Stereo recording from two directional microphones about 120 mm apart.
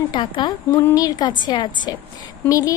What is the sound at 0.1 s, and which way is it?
A woman's voice, 40° left (ahead or behind).